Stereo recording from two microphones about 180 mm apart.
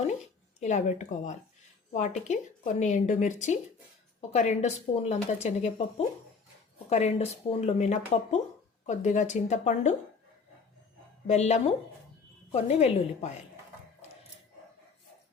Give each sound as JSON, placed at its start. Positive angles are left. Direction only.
{"t": 0.6, "sound": "speech", "side_deg": 40}
{"t": 6.9, "sound": "speech", "side_deg": 35}
{"t": 11.3, "sound": "speech", "side_deg": 40}